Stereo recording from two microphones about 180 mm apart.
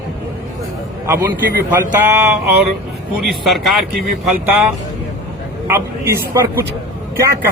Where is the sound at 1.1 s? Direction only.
55° right (ahead or behind).